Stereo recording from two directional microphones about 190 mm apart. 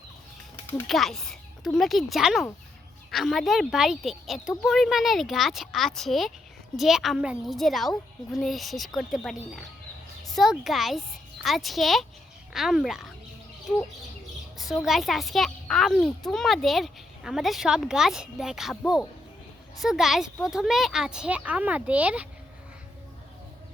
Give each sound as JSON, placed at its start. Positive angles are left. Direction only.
{"t": 0.5, "sound": "a sound", "side_deg": 10}
{"t": 0.9, "sound": "a child's voice", "side_deg": 0}
{"t": 14.6, "sound": "a child's voice", "side_deg": 0}